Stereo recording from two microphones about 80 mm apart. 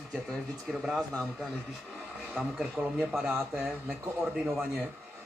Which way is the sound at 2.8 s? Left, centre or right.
Centre.